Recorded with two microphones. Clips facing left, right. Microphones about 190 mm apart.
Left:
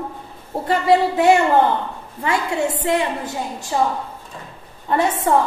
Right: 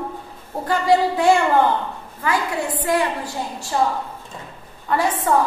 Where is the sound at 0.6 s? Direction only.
25° left (ahead or behind).